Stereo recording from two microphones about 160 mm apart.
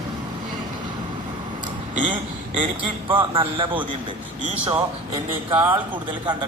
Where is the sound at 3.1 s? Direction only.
30° right (ahead or behind).